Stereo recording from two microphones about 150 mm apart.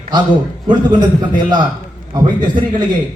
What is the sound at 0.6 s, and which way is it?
Speech, 30° right (ahead or behind).